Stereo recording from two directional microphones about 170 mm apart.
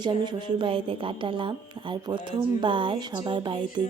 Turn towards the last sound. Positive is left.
turn(degrees=-30)  # may be behind; listen again after turning